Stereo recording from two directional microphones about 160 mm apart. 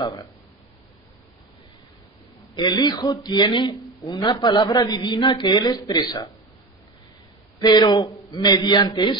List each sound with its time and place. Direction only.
0.0 s speech: 25° left (ahead or behind)
2.5 s speech: 25° left (ahead or behind)
7.5 s speech: 25° left (ahead or behind)